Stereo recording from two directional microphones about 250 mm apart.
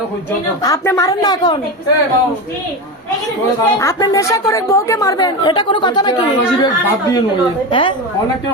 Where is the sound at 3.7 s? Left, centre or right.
Centre.